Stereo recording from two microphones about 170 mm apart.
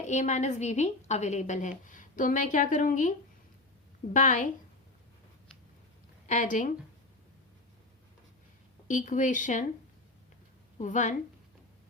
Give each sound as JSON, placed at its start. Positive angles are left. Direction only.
{"t": 0.0, "sound": "a woman's voice", "side_deg": 45}
{"t": 4.1, "sound": "a woman's voice", "side_deg": 50}
{"t": 6.2, "sound": "a woman's voice", "side_deg": 50}
{"t": 8.9, "sound": "a woman's voice", "side_deg": 50}
{"t": 10.8, "sound": "a woman's voice", "side_deg": 45}